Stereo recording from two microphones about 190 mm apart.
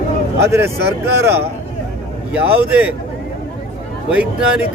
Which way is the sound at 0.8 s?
60° right (ahead or behind).